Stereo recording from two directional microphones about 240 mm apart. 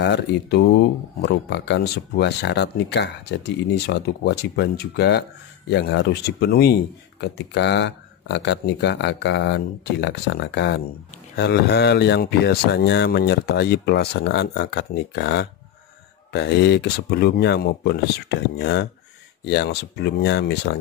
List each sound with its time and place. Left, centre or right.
0.0 s speech: left